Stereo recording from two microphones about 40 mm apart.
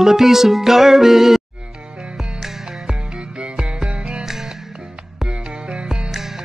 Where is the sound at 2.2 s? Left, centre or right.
Centre.